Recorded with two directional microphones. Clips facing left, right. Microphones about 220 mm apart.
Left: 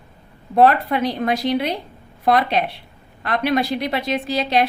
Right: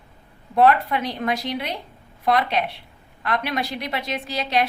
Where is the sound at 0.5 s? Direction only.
35° left (ahead or behind).